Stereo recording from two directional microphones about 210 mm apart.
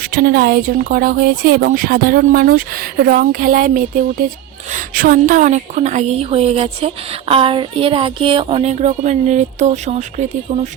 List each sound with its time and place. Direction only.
0.1 s a woman's voice: 45° right (ahead or behind)